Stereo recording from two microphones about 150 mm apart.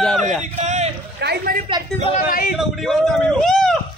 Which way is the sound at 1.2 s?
85° right.